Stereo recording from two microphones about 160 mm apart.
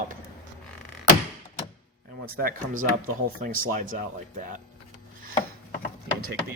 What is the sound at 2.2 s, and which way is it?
Speech, 70° right (ahead or behind).